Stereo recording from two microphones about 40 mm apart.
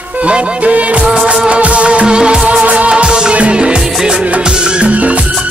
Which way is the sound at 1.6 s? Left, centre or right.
Right.